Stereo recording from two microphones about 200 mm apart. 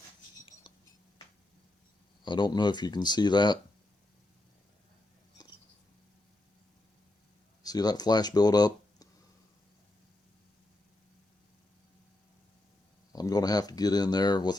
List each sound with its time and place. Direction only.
2.2 s speech: 20° left (ahead or behind)
7.6 s speech: 20° left (ahead or behind)
13.1 s a sound: 20° left (ahead or behind)